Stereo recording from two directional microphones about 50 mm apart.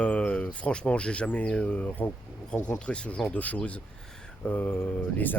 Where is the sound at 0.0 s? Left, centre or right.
Left.